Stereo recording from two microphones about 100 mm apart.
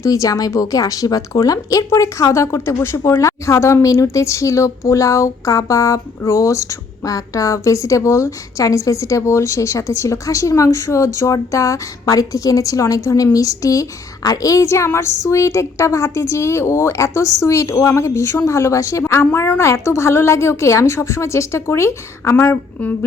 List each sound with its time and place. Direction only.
0.0 s a woman's voice: 35° left (ahead or behind)